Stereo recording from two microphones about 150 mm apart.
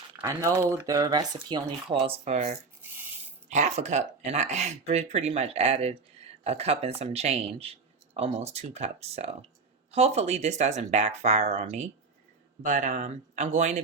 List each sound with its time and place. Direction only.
0.2 s speech: 20° right (ahead or behind); by 2.6 s 50° right (ahead or behind)
2.8 s a sound: 15° right (ahead or behind)
3.5 s speech: 50° right (ahead or behind)